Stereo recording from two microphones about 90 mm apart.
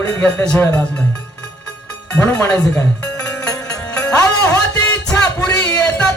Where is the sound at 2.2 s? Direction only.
30° left (ahead or behind).